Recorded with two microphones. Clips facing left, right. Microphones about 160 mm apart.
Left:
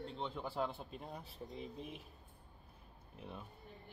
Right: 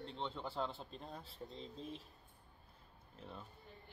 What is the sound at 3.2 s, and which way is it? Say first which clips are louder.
Speech: left 2 dB; 10° left (ahead or behind).